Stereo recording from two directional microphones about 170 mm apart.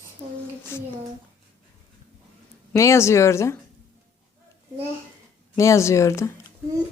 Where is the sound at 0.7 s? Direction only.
15° left (ahead or behind).